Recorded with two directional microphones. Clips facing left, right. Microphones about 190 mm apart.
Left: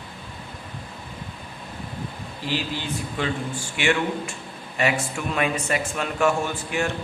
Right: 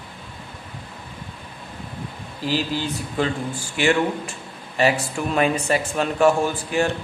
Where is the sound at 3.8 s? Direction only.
35° right (ahead or behind).